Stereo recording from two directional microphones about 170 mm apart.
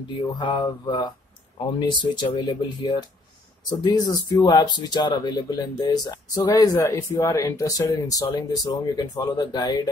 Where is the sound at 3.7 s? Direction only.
25° left (ahead or behind).